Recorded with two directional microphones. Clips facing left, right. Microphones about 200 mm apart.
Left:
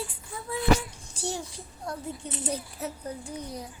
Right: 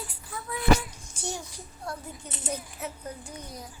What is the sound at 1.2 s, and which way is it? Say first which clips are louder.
A child's voice: left 3 dB; 30° left (ahead or behind).